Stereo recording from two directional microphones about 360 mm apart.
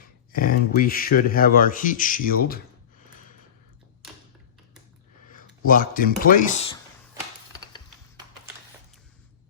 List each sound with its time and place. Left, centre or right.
0.3 s speech: left
5.3 s speech: left